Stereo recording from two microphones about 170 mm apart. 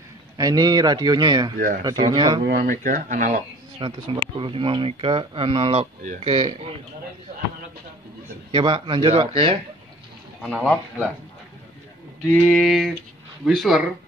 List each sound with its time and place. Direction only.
0.4 s speech: 20° right (ahead or behind)
2.4 s speech: 65° right (ahead or behind)
2.8 s speech: 50° right (ahead or behind)
3.8 s speech: 30° right (ahead or behind)
8.5 s speech: 30° right (ahead or behind)
10.4 s speech: 5° left (ahead or behind)
12.3 s speech: centre (ahead or behind)